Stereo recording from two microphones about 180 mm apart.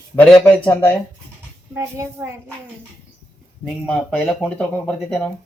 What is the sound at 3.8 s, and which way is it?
Speech, 5° left (ahead or behind).